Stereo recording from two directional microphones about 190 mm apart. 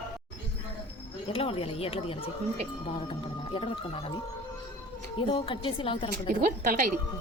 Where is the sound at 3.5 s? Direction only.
25° left (ahead or behind).